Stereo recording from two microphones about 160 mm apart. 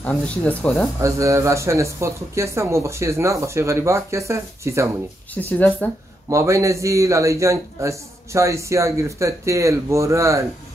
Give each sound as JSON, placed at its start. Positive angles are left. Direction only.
{"t": 0.1, "sound": "speech", "side_deg": 10}
{"t": 1.0, "sound": "speech", "side_deg": -20}
{"t": 5.3, "sound": "speech", "side_deg": 10}
{"t": 6.2, "sound": "a man's voice", "side_deg": -20}